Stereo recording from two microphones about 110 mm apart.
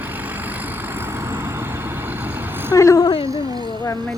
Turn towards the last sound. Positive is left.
turn(degrees=30)  # may be behind; listen again after turning